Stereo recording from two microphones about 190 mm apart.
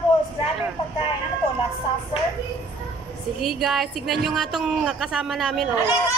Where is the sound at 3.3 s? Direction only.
Centre (ahead or behind).